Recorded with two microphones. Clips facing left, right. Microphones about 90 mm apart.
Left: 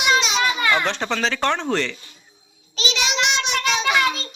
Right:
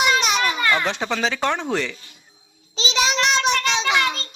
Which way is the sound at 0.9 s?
10° right (ahead or behind).